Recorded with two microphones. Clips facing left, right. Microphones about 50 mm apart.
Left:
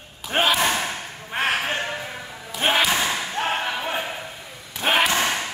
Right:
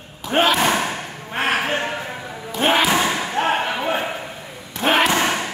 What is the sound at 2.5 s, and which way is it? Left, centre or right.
Slam, centre.